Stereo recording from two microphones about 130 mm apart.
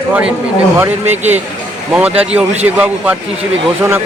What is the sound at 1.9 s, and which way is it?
Speech, 10° right (ahead or behind).